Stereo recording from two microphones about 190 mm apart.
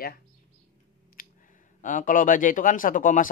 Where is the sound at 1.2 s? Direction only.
50° left (ahead or behind).